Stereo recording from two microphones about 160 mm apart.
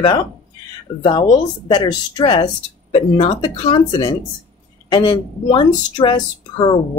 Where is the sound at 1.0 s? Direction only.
25° left (ahead or behind).